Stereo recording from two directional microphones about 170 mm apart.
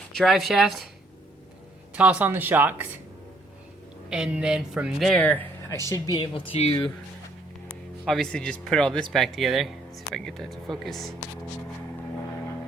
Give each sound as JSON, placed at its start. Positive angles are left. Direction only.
{"t": 0.1, "sound": "speech", "side_deg": 0}
{"t": 2.0, "sound": "speech", "side_deg": -10}
{"t": 4.1, "sound": "speech", "side_deg": -5}
{"t": 5.9, "sound": "speech", "side_deg": 25}
{"t": 7.7, "sound": "speech", "side_deg": 0}